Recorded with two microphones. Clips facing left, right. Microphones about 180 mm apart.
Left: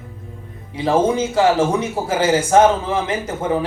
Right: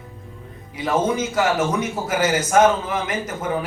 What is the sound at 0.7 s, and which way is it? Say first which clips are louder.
A man's voice: left 4 dB; 30° left (ahead or behind).